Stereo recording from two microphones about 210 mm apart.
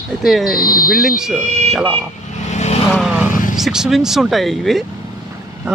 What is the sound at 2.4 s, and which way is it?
Vehicle, 35° left (ahead or behind).